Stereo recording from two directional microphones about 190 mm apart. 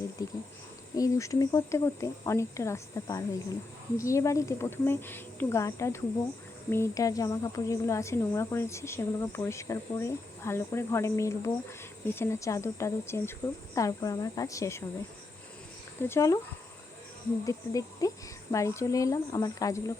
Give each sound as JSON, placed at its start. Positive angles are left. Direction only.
{"t": 0.2, "sound": "a woman's voice", "side_deg": 20}
{"t": 16.0, "sound": "a woman's voice", "side_deg": 15}
{"t": 17.4, "sound": "a woman's voice", "side_deg": 15}